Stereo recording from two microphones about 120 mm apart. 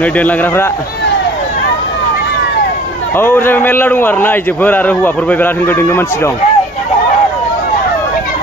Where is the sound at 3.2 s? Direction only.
20° left (ahead or behind).